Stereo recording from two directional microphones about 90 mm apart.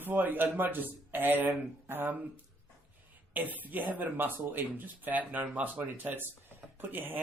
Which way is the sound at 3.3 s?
20° right (ahead or behind).